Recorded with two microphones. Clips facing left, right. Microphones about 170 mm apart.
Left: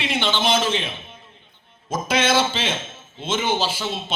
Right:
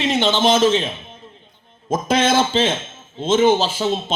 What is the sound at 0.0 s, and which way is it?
A man's voice, 40° right (ahead or behind).